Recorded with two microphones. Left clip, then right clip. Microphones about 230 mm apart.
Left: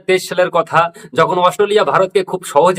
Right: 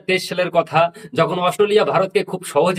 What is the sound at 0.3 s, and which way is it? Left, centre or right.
Speech, centre.